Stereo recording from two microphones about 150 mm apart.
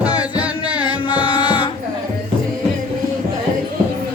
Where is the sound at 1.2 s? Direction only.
35° left (ahead or behind).